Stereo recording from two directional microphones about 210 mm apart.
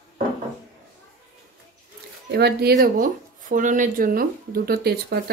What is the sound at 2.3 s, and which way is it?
Speech, 50° right (ahead or behind).